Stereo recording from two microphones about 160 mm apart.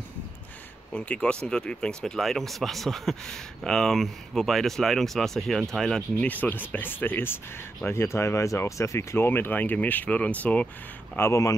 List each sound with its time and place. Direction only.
0.9 s speech: 5° left (ahead or behind)